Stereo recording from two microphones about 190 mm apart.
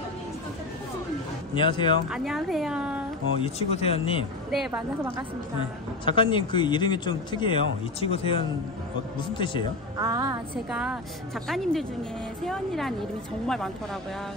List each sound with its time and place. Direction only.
1.5 s speech: 25° left (ahead or behind)
2.0 s speech: centre (ahead or behind)
3.3 s speech: 30° left (ahead or behind)
4.5 s speech: centre (ahead or behind)
5.6 s speech: 25° left (ahead or behind)
9.9 s a woman's voice: 20° right (ahead or behind)
10.7 s speech: 5° right (ahead or behind)